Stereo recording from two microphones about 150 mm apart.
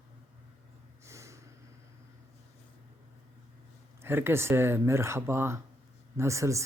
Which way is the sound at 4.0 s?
15° right (ahead or behind).